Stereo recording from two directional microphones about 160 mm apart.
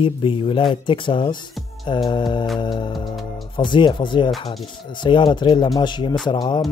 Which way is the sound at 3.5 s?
30° left (ahead or behind).